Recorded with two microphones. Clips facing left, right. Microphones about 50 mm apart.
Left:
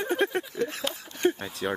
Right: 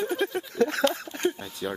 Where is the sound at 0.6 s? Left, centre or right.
Right.